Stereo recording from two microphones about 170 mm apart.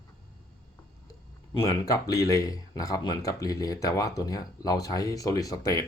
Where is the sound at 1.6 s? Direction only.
20° left (ahead or behind).